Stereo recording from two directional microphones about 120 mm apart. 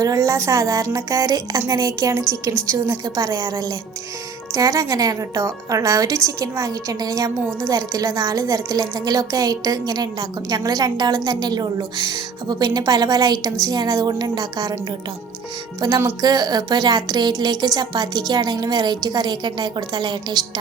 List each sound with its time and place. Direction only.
0.0 s speech: 30° right (ahead or behind)
15.8 s speech: 30° right (ahead or behind)